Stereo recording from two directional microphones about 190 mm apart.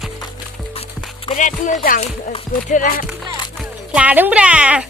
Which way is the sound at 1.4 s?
40° left (ahead or behind).